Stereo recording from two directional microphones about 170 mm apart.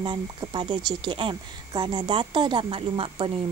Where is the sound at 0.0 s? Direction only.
30° right (ahead or behind).